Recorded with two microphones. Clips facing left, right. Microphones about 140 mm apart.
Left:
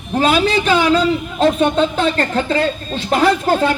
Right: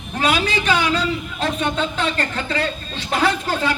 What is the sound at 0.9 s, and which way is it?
Speech, 35° left (ahead or behind).